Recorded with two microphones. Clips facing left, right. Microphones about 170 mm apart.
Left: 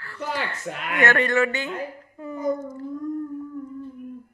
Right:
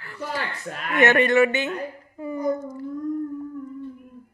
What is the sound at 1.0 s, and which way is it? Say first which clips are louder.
Speech: right 4 dB; 20° right (ahead or behind).